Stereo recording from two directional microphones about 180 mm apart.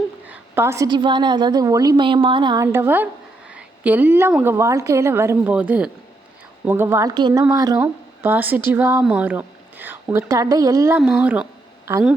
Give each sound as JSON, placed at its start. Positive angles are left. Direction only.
{"t": 0.3, "sound": "a woman's voice", "side_deg": -10}
{"t": 11.0, "sound": "a woman's voice", "side_deg": -5}